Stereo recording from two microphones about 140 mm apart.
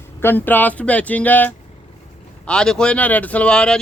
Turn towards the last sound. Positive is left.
turn(degrees=5)  # may be behind; listen again after turning